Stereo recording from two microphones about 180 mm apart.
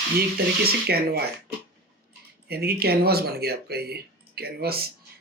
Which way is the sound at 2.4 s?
60° right (ahead or behind).